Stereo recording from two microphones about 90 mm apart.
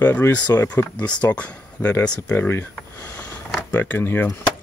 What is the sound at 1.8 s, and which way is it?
Speech, 30° left (ahead or behind).